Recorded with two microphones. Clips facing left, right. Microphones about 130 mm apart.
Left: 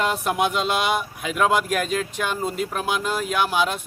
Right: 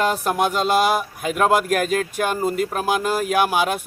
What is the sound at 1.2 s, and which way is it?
Speech, 45° right (ahead or behind).